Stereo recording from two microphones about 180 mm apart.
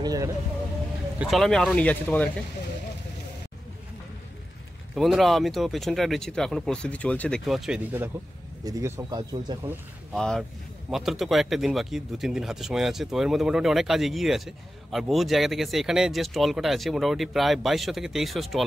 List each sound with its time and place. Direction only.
0.0 s speech: 20° right (ahead or behind)
1.2 s speech: centre (ahead or behind)
4.9 s speech: centre (ahead or behind); by 9.7 s 25° right (ahead or behind)
10.1 s speech: 5° left (ahead or behind)